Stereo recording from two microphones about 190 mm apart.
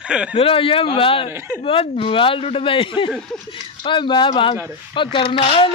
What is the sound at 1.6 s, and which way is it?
Speech, 30° left (ahead or behind).